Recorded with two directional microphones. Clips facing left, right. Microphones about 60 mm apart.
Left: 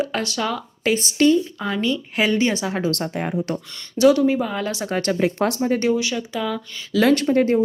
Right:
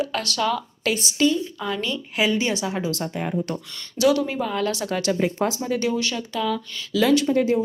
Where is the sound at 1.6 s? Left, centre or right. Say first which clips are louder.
Left 4 dB; left.